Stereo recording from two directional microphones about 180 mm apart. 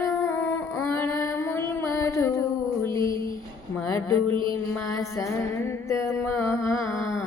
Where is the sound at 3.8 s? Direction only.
20° left (ahead or behind).